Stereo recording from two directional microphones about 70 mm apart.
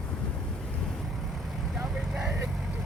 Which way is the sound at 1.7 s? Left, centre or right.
Centre.